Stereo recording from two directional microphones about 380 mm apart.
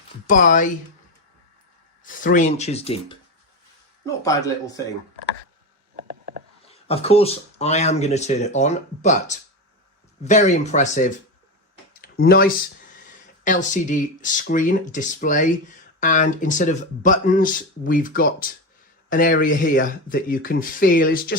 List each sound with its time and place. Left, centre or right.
0.3 s speech: centre
2.0 s speech: centre
6.0 s a sound: right
6.7 s speech: centre